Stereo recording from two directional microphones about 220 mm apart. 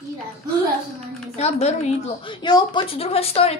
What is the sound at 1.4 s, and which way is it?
A woman's voice, 30° left (ahead or behind).